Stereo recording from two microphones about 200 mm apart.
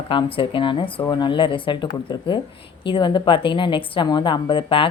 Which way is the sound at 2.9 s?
25° left (ahead or behind).